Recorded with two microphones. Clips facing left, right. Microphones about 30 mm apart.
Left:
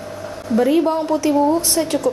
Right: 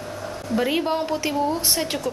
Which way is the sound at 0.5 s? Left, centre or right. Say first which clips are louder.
Left 7 dB; right.